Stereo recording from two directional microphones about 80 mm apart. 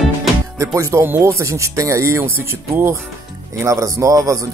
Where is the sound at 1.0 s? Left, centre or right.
Right.